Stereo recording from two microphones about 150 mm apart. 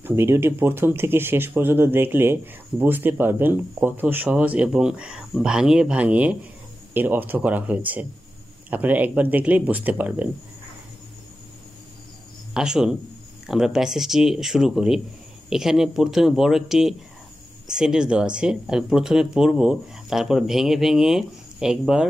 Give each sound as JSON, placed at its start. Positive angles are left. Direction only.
{"t": 0.0, "sound": "speech", "side_deg": -15}
{"t": 12.5, "sound": "speech", "side_deg": -5}